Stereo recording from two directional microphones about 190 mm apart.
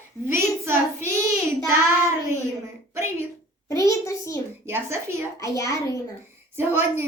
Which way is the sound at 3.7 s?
15° left (ahead or behind).